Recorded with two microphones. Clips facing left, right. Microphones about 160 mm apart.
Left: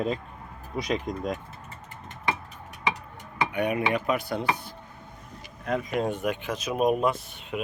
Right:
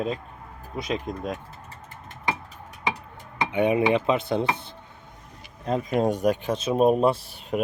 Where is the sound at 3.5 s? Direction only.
25° right (ahead or behind).